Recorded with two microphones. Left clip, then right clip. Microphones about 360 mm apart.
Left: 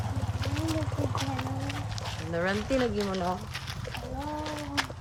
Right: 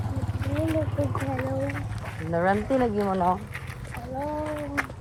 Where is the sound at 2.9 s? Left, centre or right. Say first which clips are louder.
Right 6 dB; centre.